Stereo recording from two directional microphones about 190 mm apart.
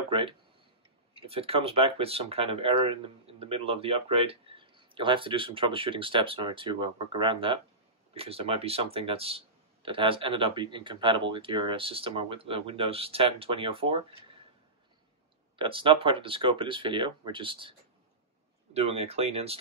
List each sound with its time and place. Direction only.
0.1 s speech: 25° right (ahead or behind)
15.5 s speech: 25° right (ahead or behind)